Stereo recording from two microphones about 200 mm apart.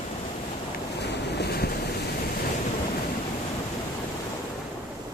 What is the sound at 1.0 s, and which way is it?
Boat, 55° left (ahead or behind).